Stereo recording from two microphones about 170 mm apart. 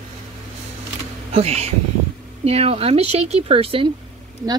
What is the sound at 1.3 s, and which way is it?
Speech, 40° right (ahead or behind).